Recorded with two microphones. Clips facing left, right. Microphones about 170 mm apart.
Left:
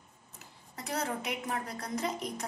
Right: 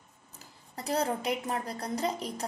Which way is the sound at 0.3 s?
35° right (ahead or behind).